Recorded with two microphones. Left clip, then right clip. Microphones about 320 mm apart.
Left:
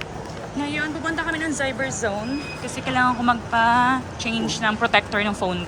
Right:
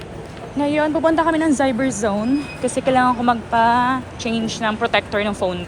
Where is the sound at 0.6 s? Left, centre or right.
Centre.